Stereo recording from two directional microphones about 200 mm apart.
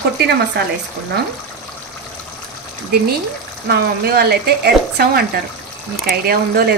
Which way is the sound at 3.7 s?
50° right (ahead or behind).